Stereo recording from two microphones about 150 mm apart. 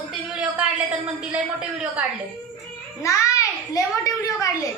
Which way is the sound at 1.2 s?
5° right (ahead or behind).